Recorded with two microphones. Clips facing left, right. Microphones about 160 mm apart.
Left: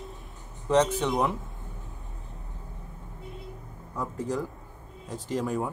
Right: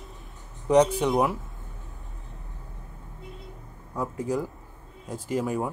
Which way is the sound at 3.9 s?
10° right (ahead or behind).